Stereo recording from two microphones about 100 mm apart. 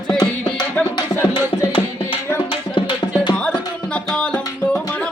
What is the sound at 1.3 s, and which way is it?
Music, 60° left (ahead or behind).